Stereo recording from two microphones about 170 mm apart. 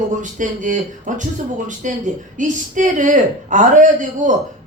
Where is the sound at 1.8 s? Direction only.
45° right (ahead or behind).